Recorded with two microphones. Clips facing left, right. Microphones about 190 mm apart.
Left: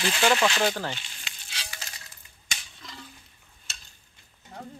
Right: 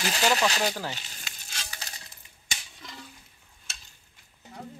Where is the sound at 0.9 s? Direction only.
40° right (ahead or behind).